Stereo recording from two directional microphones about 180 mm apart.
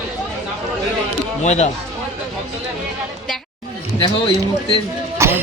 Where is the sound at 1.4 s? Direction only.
40° left (ahead or behind).